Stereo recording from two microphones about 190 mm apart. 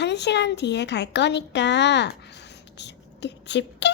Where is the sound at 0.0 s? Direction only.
65° left (ahead or behind).